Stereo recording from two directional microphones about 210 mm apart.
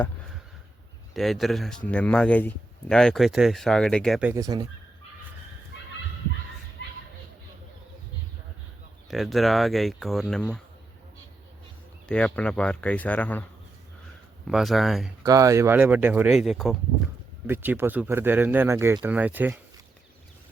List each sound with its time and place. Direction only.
1.1 s speech: centre (ahead or behind)
4.2 s speech: 15° right (ahead or behind)
9.0 s speech: centre (ahead or behind)
12.0 s speech: 5° left (ahead or behind)
14.4 s speech: centre (ahead or behind)
15.2 s speech: 15° right (ahead or behind)